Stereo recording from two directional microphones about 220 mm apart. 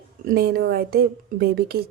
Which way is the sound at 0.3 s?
45° right (ahead or behind).